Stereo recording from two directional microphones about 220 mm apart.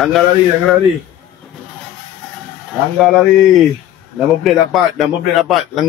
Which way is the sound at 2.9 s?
Centre (ahead or behind).